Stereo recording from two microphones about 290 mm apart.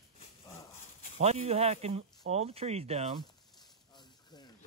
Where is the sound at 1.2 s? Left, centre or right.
Right.